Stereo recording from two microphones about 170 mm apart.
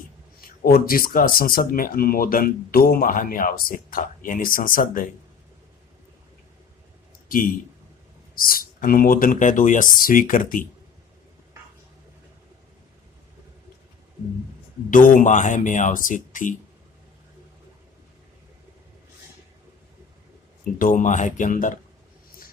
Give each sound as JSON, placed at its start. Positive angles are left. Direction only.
{"t": 0.4, "sound": "speech", "side_deg": 60}
{"t": 7.3, "sound": "a man's voice", "side_deg": 55}
{"t": 14.8, "sound": "speech", "side_deg": 50}
{"t": 20.7, "sound": "speech", "side_deg": 55}